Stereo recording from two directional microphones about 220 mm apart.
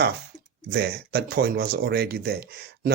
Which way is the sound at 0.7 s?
45° right (ahead or behind).